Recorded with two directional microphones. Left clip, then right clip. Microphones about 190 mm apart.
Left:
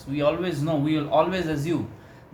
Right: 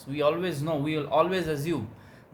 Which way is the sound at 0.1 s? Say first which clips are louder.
Left 2 dB; 45° right (ahead or behind).